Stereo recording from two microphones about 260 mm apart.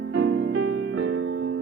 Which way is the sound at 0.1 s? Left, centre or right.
Right.